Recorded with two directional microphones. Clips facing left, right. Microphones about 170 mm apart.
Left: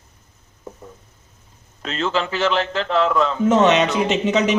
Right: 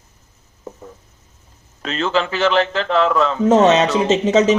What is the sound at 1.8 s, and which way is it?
Speech, 90° right.